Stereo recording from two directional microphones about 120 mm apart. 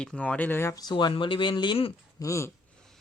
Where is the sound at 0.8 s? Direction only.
40° left (ahead or behind).